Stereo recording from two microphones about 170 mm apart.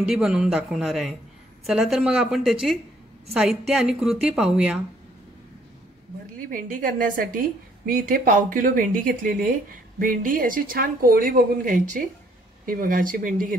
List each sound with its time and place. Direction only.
0.0 s a woman's voice: 5° right (ahead or behind)
6.5 s a woman's voice: 55° right (ahead or behind)